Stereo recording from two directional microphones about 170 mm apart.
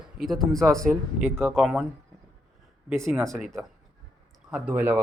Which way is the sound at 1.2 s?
15° right (ahead or behind).